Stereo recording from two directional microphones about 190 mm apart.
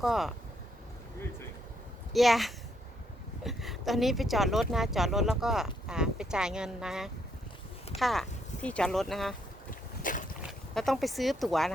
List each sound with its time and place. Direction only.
0.0 s speech: centre (ahead or behind)
2.1 s speech: centre (ahead or behind)
9.6 s boat: 45° left (ahead or behind)
10.4 s speech: centre (ahead or behind)